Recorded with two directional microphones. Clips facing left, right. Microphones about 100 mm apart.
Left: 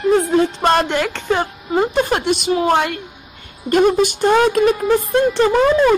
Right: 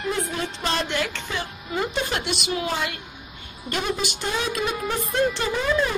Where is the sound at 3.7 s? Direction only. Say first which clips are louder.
Left 13 dB; 50° left (ahead or behind).